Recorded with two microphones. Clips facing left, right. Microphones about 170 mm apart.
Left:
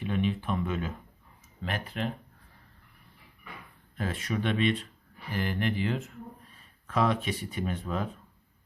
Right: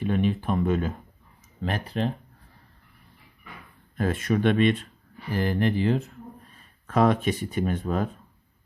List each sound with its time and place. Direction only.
0.0 s speech: 45° right (ahead or behind)
3.9 s speech: 45° right (ahead or behind)
6.8 s speech: 45° right (ahead or behind)